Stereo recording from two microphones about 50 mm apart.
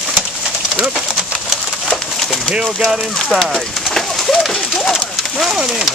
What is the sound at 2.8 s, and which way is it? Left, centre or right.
Speech, centre.